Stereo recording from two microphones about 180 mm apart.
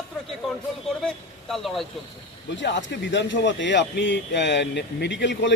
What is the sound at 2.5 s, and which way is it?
Speech, 85° left.